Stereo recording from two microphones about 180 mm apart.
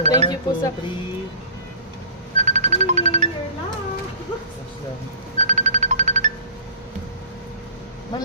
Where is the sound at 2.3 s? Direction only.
40° right (ahead or behind).